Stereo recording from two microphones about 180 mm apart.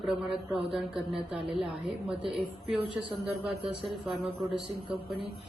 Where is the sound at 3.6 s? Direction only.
30° right (ahead or behind).